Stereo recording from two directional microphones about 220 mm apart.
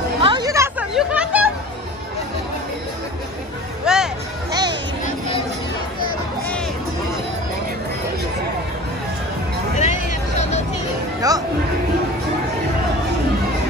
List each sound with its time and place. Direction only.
0.2 s a sound: 20° right (ahead or behind)
0.9 s chatter: 5° right (ahead or behind)
3.8 s hubbub: 5° right (ahead or behind)
4.5 s a sound: 20° right (ahead or behind)
9.8 s vehicle: 30° left (ahead or behind)
11.1 s music: 15° right (ahead or behind)